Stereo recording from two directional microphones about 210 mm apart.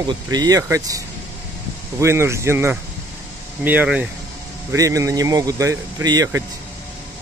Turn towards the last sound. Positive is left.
turn(degrees=-15)  # may be behind; listen again after turning